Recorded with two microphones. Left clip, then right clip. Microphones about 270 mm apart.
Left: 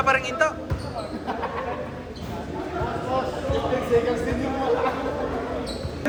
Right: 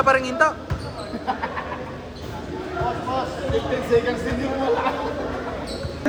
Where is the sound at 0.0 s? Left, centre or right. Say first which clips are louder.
Right 3 dB; centre.